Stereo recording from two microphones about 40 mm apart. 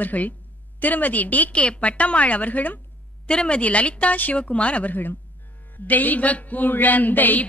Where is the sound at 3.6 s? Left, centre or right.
Left.